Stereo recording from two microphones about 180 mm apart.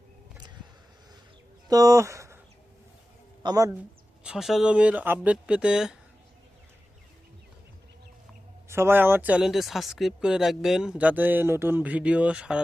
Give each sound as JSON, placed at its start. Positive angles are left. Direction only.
{"t": 1.6, "sound": "speech", "side_deg": -20}
{"t": 3.4, "sound": "speech", "side_deg": -20}
{"t": 4.2, "sound": "speech", "side_deg": -5}
{"t": 8.7, "sound": "speech", "side_deg": -15}